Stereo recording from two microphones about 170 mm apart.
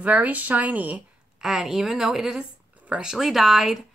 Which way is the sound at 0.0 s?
10° right (ahead or behind).